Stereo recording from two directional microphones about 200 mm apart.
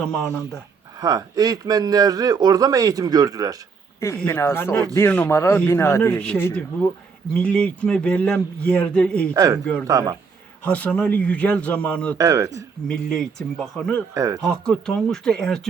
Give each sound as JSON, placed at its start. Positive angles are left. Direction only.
{"t": 0.9, "sound": "a man's voice", "side_deg": -20}
{"t": 4.0, "sound": "a man's voice", "side_deg": 10}
{"t": 9.3, "sound": "speech", "side_deg": -15}
{"t": 10.6, "sound": "a man's voice", "side_deg": 10}
{"t": 12.1, "sound": "speech", "side_deg": -15}
{"t": 12.9, "sound": "speech", "side_deg": 5}
{"t": 14.1, "sound": "speech", "side_deg": -20}
{"t": 14.4, "sound": "speech", "side_deg": 5}